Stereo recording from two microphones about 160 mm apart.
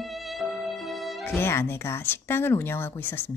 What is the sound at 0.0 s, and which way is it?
Music, centre (ahead or behind).